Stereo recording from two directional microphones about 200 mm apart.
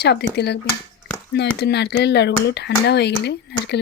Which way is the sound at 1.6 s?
55° left (ahead or behind).